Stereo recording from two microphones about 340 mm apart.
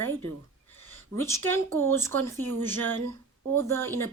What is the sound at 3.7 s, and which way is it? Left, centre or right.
Speech, centre.